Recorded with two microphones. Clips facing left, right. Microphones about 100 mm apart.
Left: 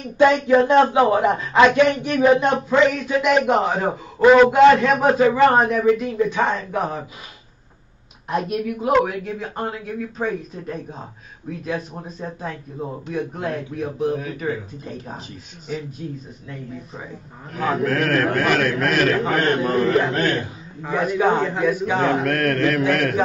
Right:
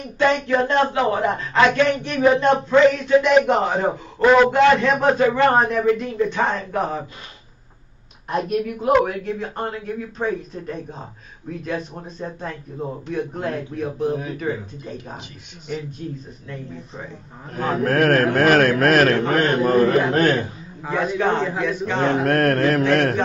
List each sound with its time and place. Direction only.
0.2 s a man's voice: 10° left (ahead or behind)
8.3 s a man's voice: centre (ahead or behind)
17.8 s a man's voice: 45° right (ahead or behind)
19.4 s a man's voice: centre (ahead or behind)
20.1 s a man's voice: 50° right (ahead or behind)
20.9 s speech: 5° left (ahead or behind)
22.3 s mantra: 40° right (ahead or behind)